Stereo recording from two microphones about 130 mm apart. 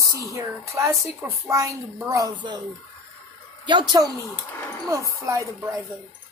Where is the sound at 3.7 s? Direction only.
35° right (ahead or behind).